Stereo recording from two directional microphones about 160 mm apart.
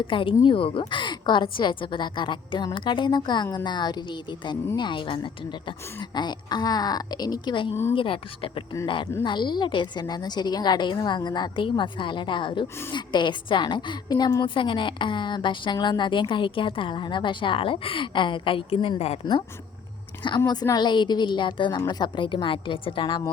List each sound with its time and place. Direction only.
0.1 s a woman's voice: 30° left (ahead or behind)
20.5 s a woman's voice: 25° left (ahead or behind)